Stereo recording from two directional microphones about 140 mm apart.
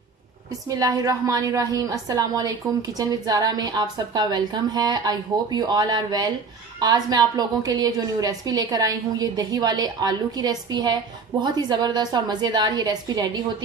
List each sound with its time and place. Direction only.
0.5 s a woman's voice: 25° right (ahead or behind)